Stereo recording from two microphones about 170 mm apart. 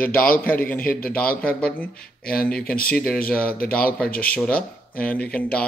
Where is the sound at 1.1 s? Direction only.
5° left (ahead or behind).